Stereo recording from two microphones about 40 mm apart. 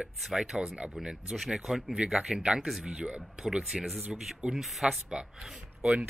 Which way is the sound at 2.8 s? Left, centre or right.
Right.